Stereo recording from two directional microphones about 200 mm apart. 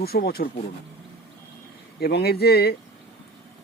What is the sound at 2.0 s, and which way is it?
Speech, 50° left (ahead or behind).